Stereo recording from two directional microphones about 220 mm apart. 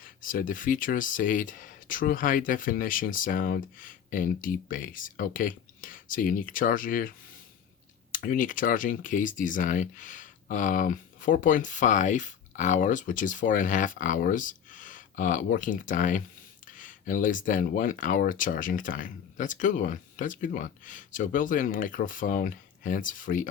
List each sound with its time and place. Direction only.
0.0 s speech: 40° left (ahead or behind)
8.1 s speech: 40° left (ahead or behind)